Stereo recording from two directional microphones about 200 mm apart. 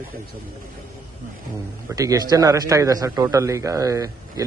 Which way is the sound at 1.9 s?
15° right (ahead or behind).